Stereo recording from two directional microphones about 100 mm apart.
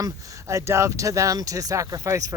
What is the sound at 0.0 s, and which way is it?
Speech, 30° right (ahead or behind).